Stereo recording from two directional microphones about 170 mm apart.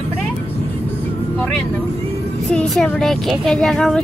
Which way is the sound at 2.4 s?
5° left (ahead or behind).